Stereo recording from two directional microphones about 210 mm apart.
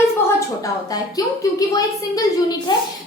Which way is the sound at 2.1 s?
20° left (ahead or behind).